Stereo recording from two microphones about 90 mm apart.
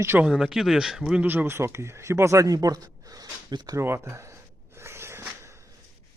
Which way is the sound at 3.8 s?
30° right (ahead or behind).